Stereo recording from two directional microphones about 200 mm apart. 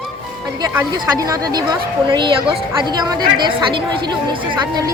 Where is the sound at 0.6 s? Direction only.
15° right (ahead or behind).